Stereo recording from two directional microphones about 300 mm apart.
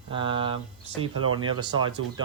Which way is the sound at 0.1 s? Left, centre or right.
Centre.